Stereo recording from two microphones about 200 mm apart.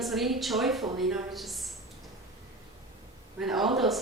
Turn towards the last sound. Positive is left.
turn(degrees=0)  # may be behind; listen again after turning